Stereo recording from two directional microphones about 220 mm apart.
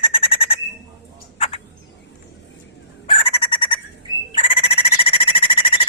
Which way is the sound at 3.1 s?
25° left (ahead or behind).